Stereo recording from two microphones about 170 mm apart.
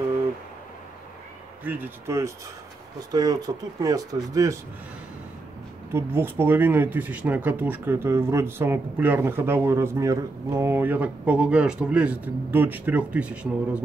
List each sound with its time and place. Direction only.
1.6 s speech: 10° right (ahead or behind)
5.9 s speech: 15° right (ahead or behind)